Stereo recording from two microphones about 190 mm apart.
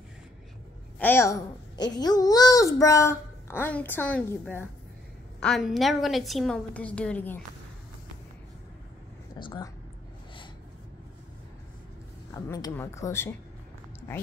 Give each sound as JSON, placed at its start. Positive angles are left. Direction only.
{"t": 0.9, "sound": "a child's voice", "side_deg": 10}
{"t": 9.4, "sound": "speech", "side_deg": 20}
{"t": 12.4, "sound": "a child's voice", "side_deg": 15}